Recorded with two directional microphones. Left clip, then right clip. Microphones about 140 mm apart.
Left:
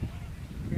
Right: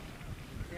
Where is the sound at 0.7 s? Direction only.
30° right (ahead or behind).